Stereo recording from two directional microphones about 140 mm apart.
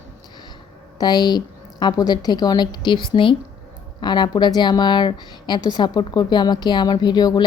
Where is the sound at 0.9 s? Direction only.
30° left (ahead or behind).